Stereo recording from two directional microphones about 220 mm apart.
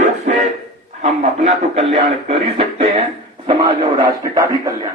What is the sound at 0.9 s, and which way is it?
A man's voice, 30° right (ahead or behind).